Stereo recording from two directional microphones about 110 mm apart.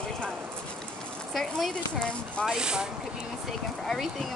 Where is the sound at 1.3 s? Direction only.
5° left (ahead or behind).